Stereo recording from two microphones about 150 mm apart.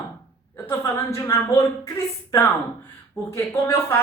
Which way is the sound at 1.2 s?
20° left (ahead or behind).